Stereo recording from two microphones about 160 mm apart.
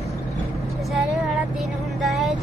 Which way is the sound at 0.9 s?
Centre (ahead or behind).